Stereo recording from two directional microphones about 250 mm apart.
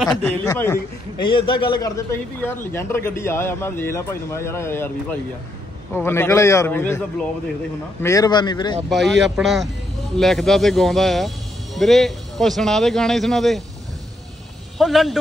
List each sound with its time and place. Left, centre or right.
0.5 s a man's voice: centre
1.2 s a man's voice: centre
5.9 s a man's voice: centre
8.8 s speech: centre
14.8 s speech: centre